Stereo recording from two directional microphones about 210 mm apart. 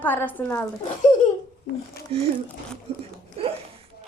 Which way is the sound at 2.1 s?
25° right (ahead or behind).